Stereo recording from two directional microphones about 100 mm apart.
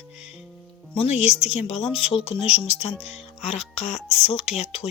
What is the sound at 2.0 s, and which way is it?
Speech, 75° left (ahead or behind).